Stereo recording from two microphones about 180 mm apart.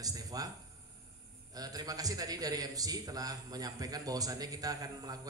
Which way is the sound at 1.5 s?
20° right (ahead or behind).